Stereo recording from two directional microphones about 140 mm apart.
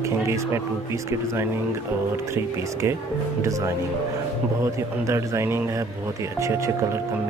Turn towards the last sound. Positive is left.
turn(degrees=-20)  # may be behind; listen again after turning